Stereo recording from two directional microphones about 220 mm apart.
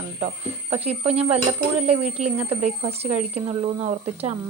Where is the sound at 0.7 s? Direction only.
25° right (ahead or behind).